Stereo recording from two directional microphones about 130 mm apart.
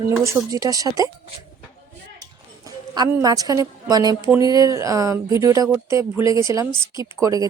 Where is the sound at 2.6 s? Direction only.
30° right (ahead or behind).